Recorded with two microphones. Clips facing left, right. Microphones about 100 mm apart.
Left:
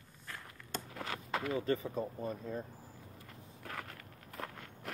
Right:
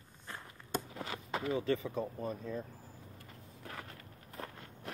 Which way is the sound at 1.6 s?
40° left (ahead or behind).